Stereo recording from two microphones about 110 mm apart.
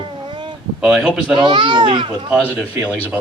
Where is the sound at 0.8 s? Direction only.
5° right (ahead or behind).